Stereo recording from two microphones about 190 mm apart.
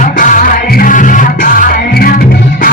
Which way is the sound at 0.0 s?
45° left (ahead or behind).